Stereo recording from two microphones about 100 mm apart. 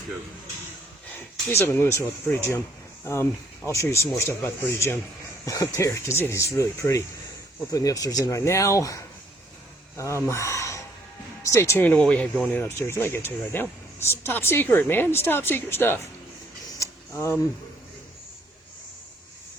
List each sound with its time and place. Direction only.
1.5 s speech: 25° left (ahead or behind)
11.9 s speech: 10° left (ahead or behind)
12.6 s speech: 25° left (ahead or behind)
16.8 s a sound: 30° left (ahead or behind)